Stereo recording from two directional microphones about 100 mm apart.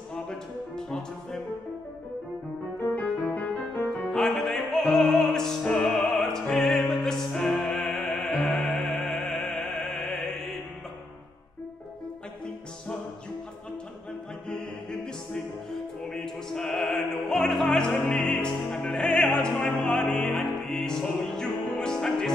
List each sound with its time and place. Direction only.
0.1 s music: 5° left (ahead or behind)
3.0 s music: 15° left (ahead or behind)
4.1 s opera: 5° left (ahead or behind)
14.5 s music: 10° left (ahead or behind)
16.1 s opera: 5° left (ahead or behind)